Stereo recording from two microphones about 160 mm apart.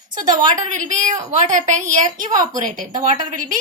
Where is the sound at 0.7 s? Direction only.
50° right (ahead or behind).